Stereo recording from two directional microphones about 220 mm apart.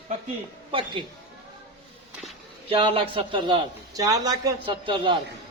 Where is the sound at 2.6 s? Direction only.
25° right (ahead or behind).